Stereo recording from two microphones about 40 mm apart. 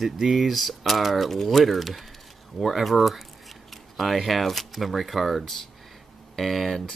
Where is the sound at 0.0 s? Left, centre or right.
Centre.